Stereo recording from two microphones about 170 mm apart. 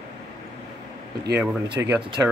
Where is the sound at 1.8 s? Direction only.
10° right (ahead or behind).